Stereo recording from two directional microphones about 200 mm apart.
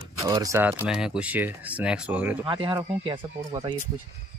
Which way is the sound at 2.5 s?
25° right (ahead or behind).